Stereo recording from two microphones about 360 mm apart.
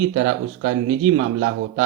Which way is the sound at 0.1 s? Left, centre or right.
Right.